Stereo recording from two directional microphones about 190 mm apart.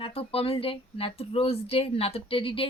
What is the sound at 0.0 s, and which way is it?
Speech, 30° left (ahead or behind).